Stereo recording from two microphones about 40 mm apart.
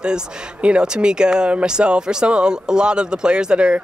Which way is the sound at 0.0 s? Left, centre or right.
Right.